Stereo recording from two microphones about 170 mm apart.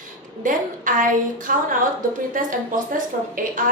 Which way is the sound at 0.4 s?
50° right (ahead or behind).